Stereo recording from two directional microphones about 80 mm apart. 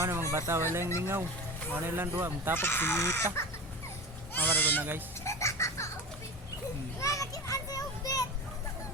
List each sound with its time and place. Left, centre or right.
0.0 s speech: right
2.6 s speech: left
4.4 s speech: left
4.8 s speech: right
5.2 s music: left
7.0 s children playing: left